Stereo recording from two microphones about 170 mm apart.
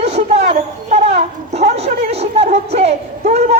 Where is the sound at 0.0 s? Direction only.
40° right (ahead or behind).